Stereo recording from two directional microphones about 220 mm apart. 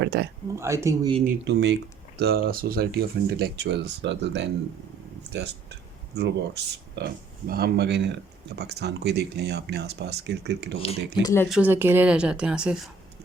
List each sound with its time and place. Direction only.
0.0 s a sound: 50° right (ahead or behind)
0.5 s speech: 10° right (ahead or behind)
1.3 s speech: 50° right (ahead or behind)
11.2 s speech: 15° left (ahead or behind)
11.4 s speech: 5° right (ahead or behind)